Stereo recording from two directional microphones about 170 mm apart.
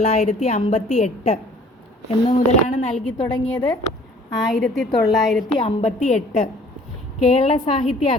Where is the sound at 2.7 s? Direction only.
40° left (ahead or behind).